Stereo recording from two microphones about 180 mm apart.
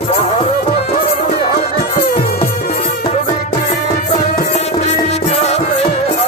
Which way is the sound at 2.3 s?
35° left (ahead or behind).